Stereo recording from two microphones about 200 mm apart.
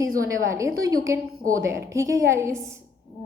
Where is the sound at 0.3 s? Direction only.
15° right (ahead or behind).